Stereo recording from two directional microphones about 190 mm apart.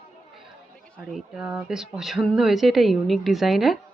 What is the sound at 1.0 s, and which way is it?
Speech, centre (ahead or behind).